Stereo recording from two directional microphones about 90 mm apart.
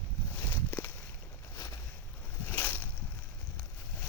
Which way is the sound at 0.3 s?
25° left (ahead or behind).